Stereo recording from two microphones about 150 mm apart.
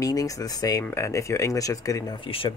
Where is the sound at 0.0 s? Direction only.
25° left (ahead or behind).